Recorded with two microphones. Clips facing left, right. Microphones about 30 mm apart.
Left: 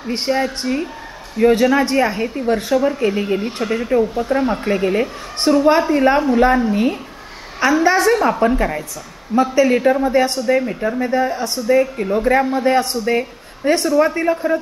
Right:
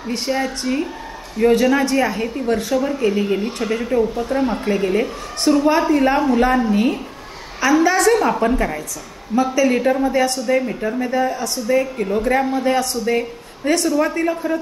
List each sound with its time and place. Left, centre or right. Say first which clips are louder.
0.3 s speech: left 2 dB; centre
1.4 s speech: left 1 dB; centre
7.6 s a woman's voice: even; left
8.0 s speech: left 1 dB; centre
9.3 s speech: left 2 dB; left
9.7 s speech: left 2 dB; centre
10.4 s speech: left 2 dB; centre
11.0 s speech: left 1 dB; left
11.6 s speech: left 3 dB; centre
13.0 s speech: left 1 dB; centre